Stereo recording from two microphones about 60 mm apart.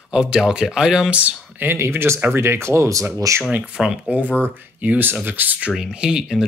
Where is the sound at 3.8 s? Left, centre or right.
Centre.